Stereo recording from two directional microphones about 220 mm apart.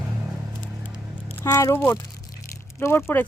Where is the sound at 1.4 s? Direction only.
15° left (ahead or behind).